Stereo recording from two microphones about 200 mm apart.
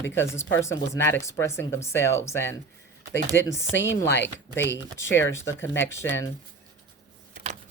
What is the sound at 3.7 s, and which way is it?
Speech, 70° left (ahead or behind).